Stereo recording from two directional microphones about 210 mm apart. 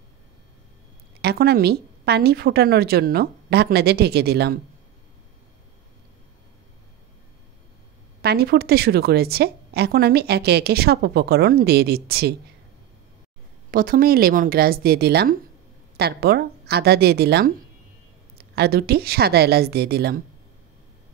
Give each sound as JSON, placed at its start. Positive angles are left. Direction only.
{"t": 1.2, "sound": "a woman's voice", "side_deg": -50}
{"t": 8.2, "sound": "a woman's voice", "side_deg": -50}
{"t": 13.7, "sound": "a woman's voice", "side_deg": -40}